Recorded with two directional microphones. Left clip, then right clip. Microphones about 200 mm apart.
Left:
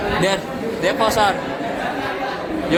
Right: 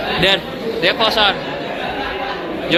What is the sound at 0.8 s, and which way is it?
Speech, 5° left (ahead or behind).